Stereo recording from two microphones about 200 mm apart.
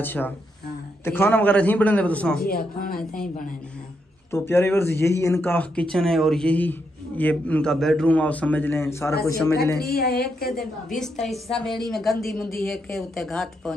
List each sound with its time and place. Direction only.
0.0 s speech: 10° left (ahead or behind)
2.4 s a woman's voice: 45° left (ahead or behind)
4.3 s speech: 10° left (ahead or behind)
9.8 s a woman's voice: 50° left (ahead or behind)
11.0 s a woman's voice: centre (ahead or behind)